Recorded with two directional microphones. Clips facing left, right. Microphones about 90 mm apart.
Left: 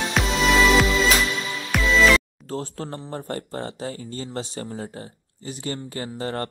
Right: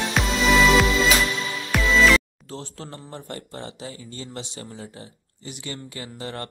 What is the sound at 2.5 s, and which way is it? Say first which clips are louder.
Speech: left 6 dB; 40° left (ahead or behind).